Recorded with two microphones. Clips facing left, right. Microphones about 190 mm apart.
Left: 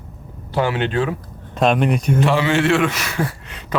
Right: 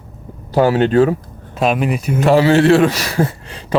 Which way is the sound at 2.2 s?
40° right (ahead or behind).